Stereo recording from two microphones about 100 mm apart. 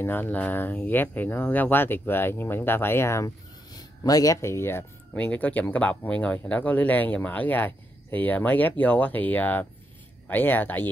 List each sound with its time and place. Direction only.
0.0 s speech: 20° left (ahead or behind)
3.7 s speech: 40° left (ahead or behind)
5.1 s speech: 15° left (ahead or behind)